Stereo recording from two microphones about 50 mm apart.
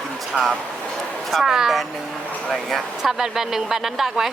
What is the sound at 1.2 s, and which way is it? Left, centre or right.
Speech, centre.